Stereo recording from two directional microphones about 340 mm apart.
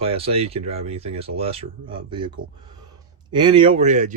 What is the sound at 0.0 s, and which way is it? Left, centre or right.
Speech, centre.